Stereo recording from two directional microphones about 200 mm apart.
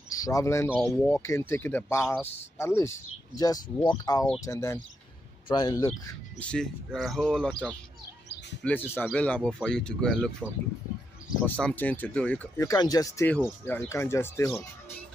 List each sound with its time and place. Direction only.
0.1 s speech: 15° left (ahead or behind)
0.7 s speech: centre (ahead or behind); by 6.1 s 15° left (ahead or behind)
6.4 s speech: 5° left (ahead or behind)
8.6 s speech: 10° left (ahead or behind)
11.4 s speech: 10° left (ahead or behind)